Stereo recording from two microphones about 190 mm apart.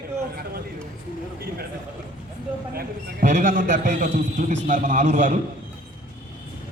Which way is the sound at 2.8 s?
45° right (ahead or behind).